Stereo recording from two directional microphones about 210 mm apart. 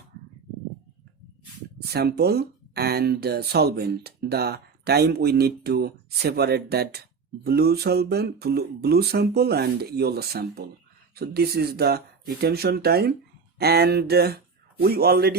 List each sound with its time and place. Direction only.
1.9 s speech: 50° right (ahead or behind)